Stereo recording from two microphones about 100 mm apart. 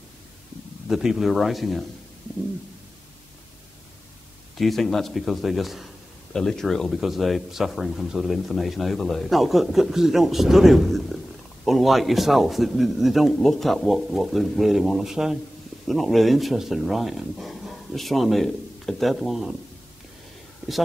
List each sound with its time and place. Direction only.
0.8 s speech: 5° right (ahead or behind)
4.6 s speech: centre (ahead or behind)